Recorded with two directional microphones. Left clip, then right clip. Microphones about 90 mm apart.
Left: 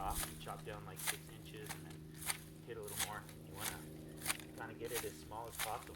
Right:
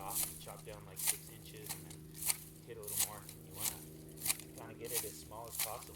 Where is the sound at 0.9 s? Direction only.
35° right (ahead or behind).